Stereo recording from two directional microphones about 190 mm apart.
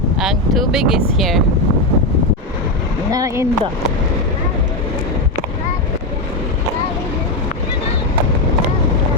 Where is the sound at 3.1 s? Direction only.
20° right (ahead or behind).